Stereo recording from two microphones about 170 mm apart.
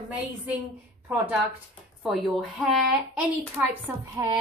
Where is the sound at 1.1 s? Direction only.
10° right (ahead or behind).